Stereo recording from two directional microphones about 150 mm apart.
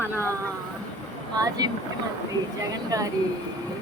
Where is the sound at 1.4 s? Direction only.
25° right (ahead or behind).